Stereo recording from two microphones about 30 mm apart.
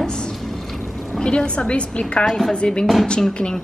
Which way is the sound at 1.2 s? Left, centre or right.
Left.